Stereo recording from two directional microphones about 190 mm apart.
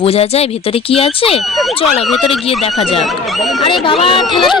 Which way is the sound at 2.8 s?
30° left (ahead or behind).